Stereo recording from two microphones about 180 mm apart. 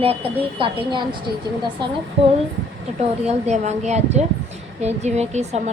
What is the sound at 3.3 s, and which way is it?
Speech, 40° right (ahead or behind).